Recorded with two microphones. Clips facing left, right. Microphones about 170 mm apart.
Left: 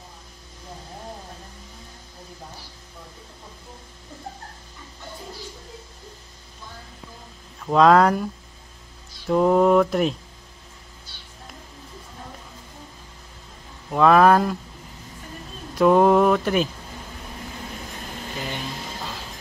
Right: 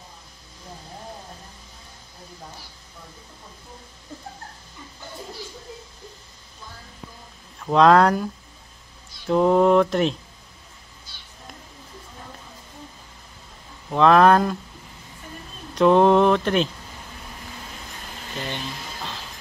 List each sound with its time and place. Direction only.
7.6 s speech: centre (ahead or behind)
9.3 s speech: centre (ahead or behind)
13.8 s speech: 5° left (ahead or behind)
15.7 s speech: 5° left (ahead or behind)
18.3 s a sound: 5° left (ahead or behind)